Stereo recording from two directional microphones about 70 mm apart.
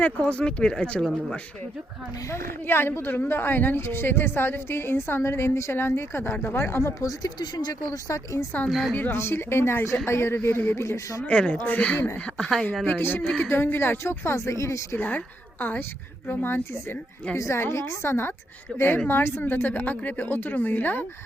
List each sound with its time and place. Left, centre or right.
0.0 s speech: centre
2.3 s a woman's voice: left
7.0 s speech: left
8.7 s a woman's voice: centre
9.0 s a woman's voice: left
10.8 s speech: left
11.2 s speech: centre
12.4 s a woman's voice: centre
12.8 s a woman's voice: left
14.9 s speech: left
16.2 s speech: left
17.3 s a woman's voice: left
18.7 s speech: centre
19.0 s speech: left